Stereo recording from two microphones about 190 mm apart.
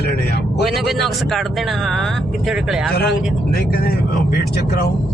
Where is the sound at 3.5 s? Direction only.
50° left (ahead or behind).